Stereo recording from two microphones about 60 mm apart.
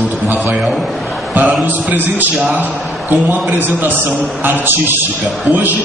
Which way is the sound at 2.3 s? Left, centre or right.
Centre.